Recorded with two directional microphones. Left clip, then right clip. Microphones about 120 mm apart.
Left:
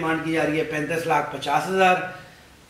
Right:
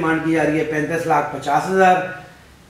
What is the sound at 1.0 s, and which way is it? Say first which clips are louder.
Speech: right 4 dB; 25° left (ahead or behind).